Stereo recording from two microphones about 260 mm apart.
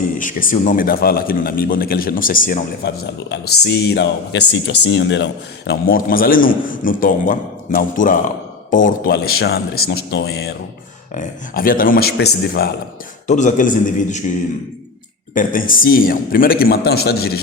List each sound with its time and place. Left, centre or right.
0.2 s a man's voice: left
13.2 s a man's voice: left
15.4 s a man's voice: left